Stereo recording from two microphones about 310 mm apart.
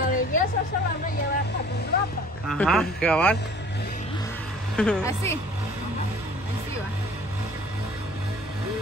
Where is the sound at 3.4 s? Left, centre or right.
Left.